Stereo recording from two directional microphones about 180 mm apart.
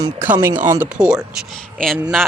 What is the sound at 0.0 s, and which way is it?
Speech, 15° right (ahead or behind).